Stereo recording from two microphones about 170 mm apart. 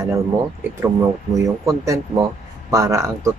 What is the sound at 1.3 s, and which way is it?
Speech, 20° right (ahead or behind).